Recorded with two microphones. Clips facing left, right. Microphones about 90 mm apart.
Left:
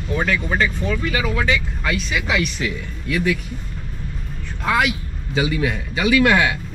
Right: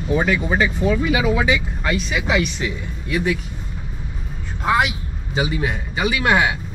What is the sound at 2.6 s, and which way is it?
Speech, 20° right (ahead or behind).